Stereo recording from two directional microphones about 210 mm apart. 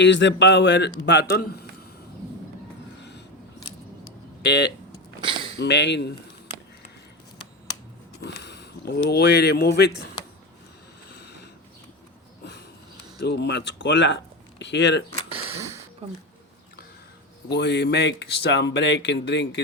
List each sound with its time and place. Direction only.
0.0 s speech: 60° left (ahead or behind)
4.4 s speech: 55° left (ahead or behind)
5.2 s a sound: 25° right (ahead or behind)
5.5 s speech: 55° left (ahead or behind)
8.2 s speech: 50° left (ahead or behind)
11.1 s a sound: 50° left (ahead or behind)
13.1 s speech: 50° left (ahead or behind)
15.4 s a sound: 15° right (ahead or behind)
16.0 s speech: 30° right (ahead or behind)
17.5 s speech: 55° left (ahead or behind)